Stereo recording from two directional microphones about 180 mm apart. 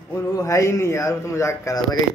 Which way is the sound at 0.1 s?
15° left (ahead or behind).